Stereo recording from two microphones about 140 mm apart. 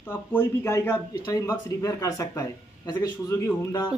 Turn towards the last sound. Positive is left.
turn(degrees=25)  # may be behind; listen again after turning